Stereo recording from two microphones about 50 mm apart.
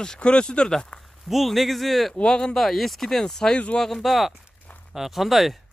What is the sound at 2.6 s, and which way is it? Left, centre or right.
Speech, centre.